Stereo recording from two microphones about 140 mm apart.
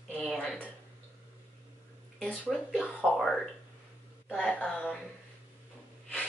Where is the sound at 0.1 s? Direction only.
Centre (ahead or behind).